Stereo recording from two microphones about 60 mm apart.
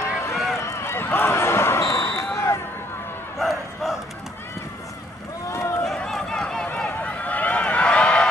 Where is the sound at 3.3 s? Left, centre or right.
Centre.